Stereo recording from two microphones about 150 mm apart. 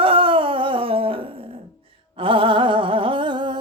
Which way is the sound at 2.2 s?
35° right (ahead or behind).